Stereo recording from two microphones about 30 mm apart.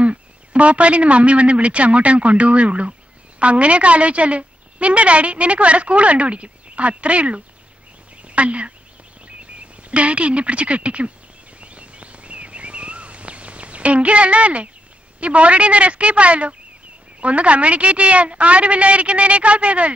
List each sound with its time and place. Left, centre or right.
0.0 s a man's voice: right
9.8 s a woman's voice: right
11.6 s a sound: right
15.1 s a woman's voice: right